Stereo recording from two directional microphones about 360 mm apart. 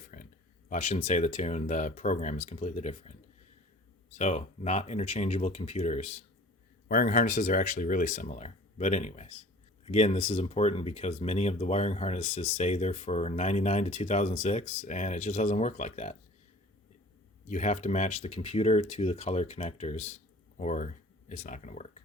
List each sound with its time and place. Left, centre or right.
0.1 s a sound: left
0.7 s speech: centre
17.5 s speech: centre